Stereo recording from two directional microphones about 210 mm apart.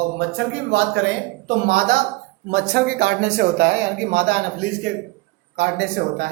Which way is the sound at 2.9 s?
55° right (ahead or behind).